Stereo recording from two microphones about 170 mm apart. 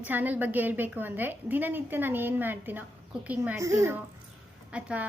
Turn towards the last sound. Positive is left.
turn(degrees=-5)  # may be behind; listen again after turning